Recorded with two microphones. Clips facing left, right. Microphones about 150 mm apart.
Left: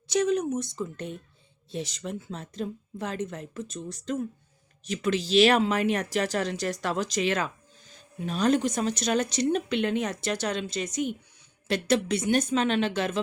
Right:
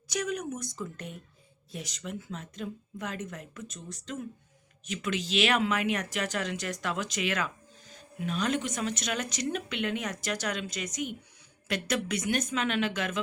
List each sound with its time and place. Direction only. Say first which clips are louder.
0.1 s a woman's voice: left 8 dB; 30° left (ahead or behind)